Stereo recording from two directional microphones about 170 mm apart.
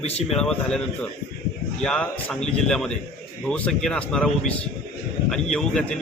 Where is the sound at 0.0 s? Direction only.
40° left (ahead or behind).